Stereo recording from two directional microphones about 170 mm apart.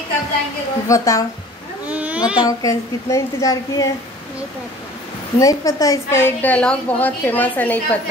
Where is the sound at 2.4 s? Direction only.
20° left (ahead or behind).